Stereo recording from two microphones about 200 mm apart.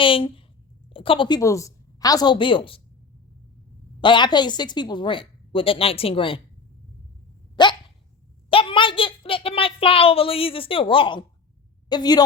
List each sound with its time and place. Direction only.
0.0 s a woman's voice: 25° left (ahead or behind)
4.0 s a woman's voice: 25° left (ahead or behind)
7.5 s dog: 20° left (ahead or behind)
8.4 s a child's voice: 25° left (ahead or behind)